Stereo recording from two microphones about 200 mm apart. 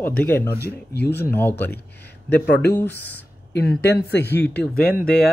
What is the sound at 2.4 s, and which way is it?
Speech, 55° left (ahead or behind).